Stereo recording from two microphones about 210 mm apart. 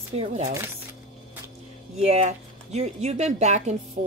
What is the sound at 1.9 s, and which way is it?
Speech, 30° right (ahead or behind).